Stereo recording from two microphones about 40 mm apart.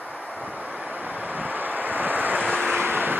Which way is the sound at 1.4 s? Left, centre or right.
Right.